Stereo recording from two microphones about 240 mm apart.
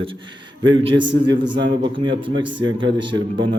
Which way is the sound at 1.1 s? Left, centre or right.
Centre.